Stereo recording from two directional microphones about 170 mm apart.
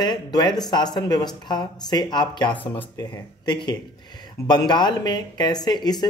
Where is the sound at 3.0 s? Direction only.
25° left (ahead or behind).